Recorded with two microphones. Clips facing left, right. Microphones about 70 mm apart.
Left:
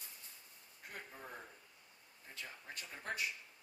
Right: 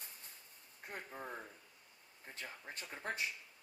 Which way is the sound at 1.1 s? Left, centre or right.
Right.